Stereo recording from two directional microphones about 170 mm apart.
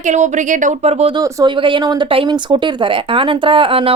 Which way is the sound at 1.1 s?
25° right (ahead or behind).